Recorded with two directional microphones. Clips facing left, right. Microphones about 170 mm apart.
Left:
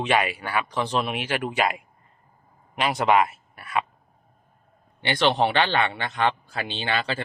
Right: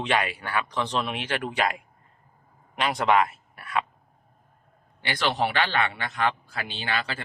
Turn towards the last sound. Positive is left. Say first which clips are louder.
# left 3 dB
turn(degrees=30)  # may be behind; listen again after turning